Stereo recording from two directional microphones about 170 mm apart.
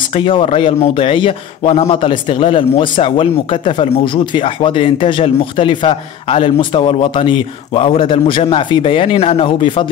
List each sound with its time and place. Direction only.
0.1 s a man's voice: 30° left (ahead or behind)